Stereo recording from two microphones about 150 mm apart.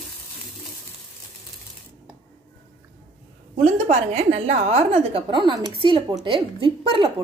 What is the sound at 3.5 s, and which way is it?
Speech, 50° right (ahead or behind).